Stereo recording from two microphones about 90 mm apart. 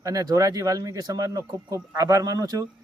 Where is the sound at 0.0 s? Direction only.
45° right (ahead or behind).